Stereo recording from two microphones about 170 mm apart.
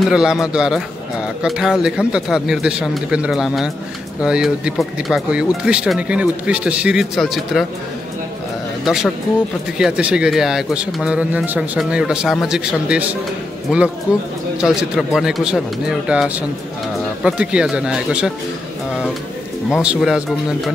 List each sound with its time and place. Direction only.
0.1 s speech: 5° right (ahead or behind)
8.8 s speech: centre (ahead or behind)
14.6 s speech: 5° right (ahead or behind)
19.7 s speech: 5° right (ahead or behind)